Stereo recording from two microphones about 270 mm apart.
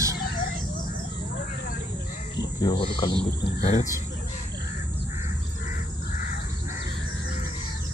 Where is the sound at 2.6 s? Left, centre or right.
Centre.